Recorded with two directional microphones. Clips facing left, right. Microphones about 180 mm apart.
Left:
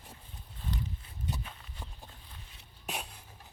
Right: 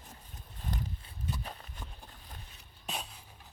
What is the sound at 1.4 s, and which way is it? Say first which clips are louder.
Clip-clop: right 3 dB; 40° right (ahead or behind).